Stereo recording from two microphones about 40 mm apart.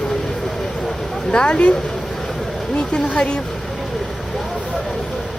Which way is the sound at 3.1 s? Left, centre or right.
Left.